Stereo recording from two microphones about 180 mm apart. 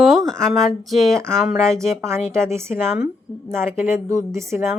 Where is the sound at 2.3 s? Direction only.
15° right (ahead or behind).